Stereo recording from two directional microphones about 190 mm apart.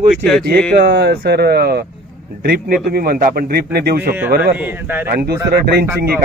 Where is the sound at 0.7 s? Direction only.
60° right (ahead or behind).